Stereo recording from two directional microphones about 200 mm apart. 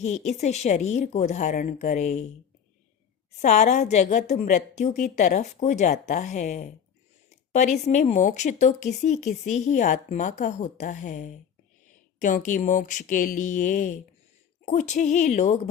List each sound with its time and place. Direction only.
0.0 s speech: 35° left (ahead or behind)
3.4 s speech: 35° left (ahead or behind)